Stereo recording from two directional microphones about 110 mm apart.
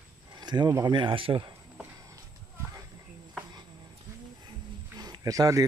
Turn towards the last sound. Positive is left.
turn(degrees=-30)  # may be behind; listen again after turning